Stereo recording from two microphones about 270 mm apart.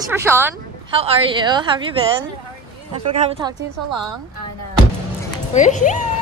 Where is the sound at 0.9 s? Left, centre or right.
Right.